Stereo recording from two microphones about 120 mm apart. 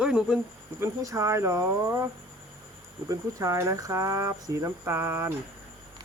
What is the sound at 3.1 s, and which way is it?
Speech, 25° right (ahead or behind).